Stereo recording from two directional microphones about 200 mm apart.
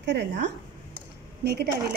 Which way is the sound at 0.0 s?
60° right (ahead or behind).